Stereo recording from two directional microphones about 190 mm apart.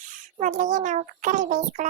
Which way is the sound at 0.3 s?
40° right (ahead or behind).